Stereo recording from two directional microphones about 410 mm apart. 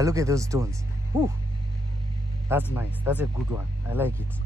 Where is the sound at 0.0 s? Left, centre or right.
Centre.